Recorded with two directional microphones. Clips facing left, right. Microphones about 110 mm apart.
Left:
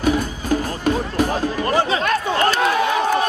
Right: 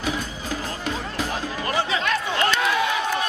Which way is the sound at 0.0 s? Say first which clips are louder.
Left 8 dB; 50° left (ahead or behind).